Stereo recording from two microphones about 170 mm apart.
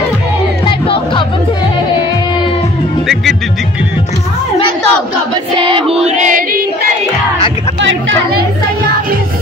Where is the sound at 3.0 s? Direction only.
Centre (ahead or behind).